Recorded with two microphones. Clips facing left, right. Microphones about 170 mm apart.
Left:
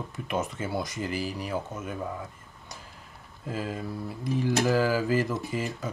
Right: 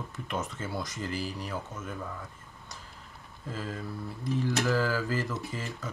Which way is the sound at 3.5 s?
15° left (ahead or behind).